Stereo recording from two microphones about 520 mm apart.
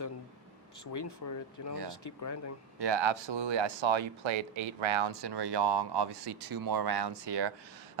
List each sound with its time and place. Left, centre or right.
0.9 s speech: left
2.7 s speech: right